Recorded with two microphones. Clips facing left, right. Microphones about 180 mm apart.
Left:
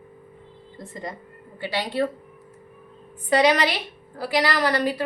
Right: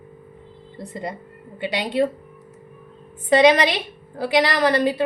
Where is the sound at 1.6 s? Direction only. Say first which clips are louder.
Right 4 dB; 20° right (ahead or behind).